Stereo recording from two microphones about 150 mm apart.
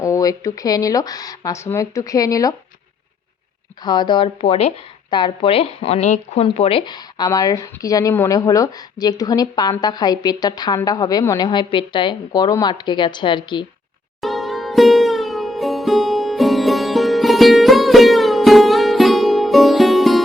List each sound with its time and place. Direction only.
0.0 s speech: 20° left (ahead or behind)
3.8 s speech: 30° left (ahead or behind)
14.2 s music: centre (ahead or behind)